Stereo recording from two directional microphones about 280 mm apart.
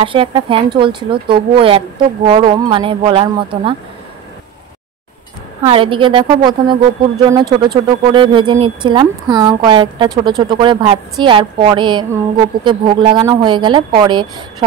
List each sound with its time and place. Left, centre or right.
0.0 s speech: centre
5.6 s speech: centre